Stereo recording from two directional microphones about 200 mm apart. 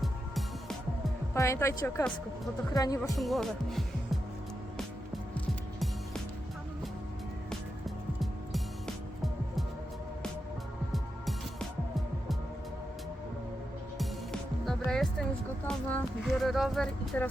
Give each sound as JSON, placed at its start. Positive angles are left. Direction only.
{"t": 0.0, "sound": "music", "side_deg": 0}
{"t": 1.3, "sound": "a woman's voice", "side_deg": 15}
{"t": 3.2, "sound": "speech", "side_deg": 0}
{"t": 7.9, "sound": "music", "side_deg": 0}
{"t": 14.8, "sound": "a sound", "side_deg": 0}